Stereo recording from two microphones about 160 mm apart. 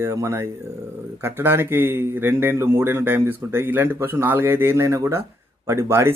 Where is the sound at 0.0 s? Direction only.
15° right (ahead or behind).